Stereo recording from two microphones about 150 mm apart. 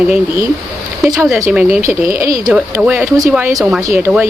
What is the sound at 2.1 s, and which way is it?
Speech, 20° right (ahead or behind).